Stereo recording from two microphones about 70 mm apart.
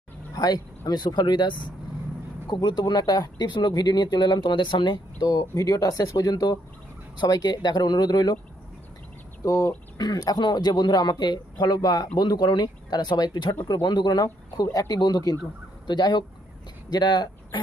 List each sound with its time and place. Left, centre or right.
0.3 s speech: left
2.6 s speech: left
7.2 s speech: left
9.4 s speech: left
10.0 s speech: left
14.6 s speech: left
15.9 s speech: left